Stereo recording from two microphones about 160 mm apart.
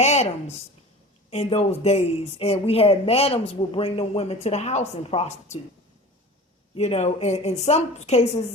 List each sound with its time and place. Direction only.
0.0 s a woman's voice: 45° left (ahead or behind)
6.7 s a woman's voice: 40° left (ahead or behind)